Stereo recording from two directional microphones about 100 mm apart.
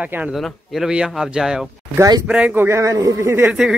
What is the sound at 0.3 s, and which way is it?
Speech, 5° right (ahead or behind).